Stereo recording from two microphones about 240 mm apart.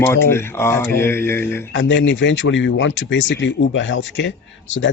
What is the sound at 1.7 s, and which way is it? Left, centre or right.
Speech, left.